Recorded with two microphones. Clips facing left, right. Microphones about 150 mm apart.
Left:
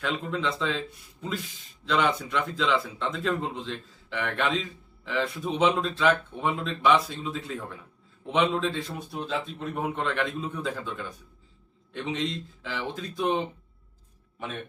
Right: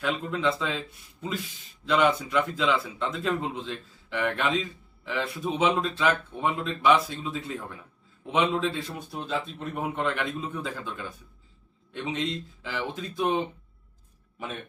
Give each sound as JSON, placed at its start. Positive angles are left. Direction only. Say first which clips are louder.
{"t": 0.0, "sound": "speech", "louder": "right 2 dB", "side_deg": -5}